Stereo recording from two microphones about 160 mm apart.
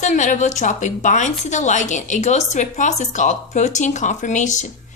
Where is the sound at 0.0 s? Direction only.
50° left (ahead or behind).